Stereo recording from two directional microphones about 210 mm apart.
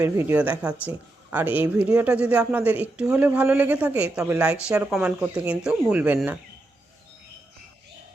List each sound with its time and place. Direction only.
0.0 s speech: 10° right (ahead or behind)